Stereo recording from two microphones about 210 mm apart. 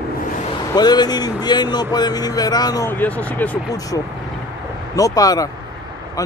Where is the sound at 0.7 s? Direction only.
20° left (ahead or behind).